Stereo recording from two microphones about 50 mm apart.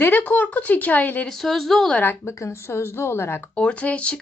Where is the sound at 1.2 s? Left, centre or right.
Centre.